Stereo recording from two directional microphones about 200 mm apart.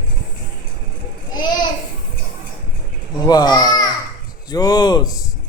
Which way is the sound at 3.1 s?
20° left (ahead or behind).